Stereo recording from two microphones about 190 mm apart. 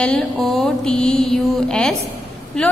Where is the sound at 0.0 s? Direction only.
5° left (ahead or behind).